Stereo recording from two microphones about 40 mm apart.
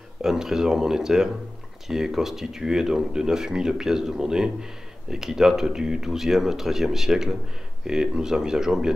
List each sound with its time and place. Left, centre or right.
0.2 s speech: centre